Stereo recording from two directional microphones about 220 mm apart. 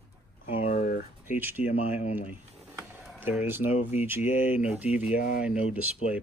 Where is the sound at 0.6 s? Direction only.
40° left (ahead or behind).